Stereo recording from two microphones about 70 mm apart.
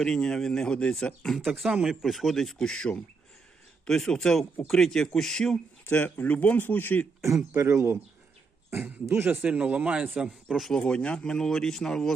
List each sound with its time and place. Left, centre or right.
0.0 s speech: centre
1.5 s speech: centre
5.9 s speech: left
7.5 s speech: right
8.7 s speech: right
9.4 s speech: centre
10.8 s speech: centre